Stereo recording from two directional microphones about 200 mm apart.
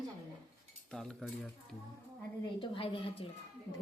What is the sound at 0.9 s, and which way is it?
Speech, 5° left (ahead or behind).